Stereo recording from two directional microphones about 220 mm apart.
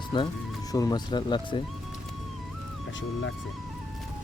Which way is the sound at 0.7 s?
15° left (ahead or behind).